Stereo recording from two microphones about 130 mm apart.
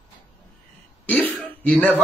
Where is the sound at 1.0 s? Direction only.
10° left (ahead or behind).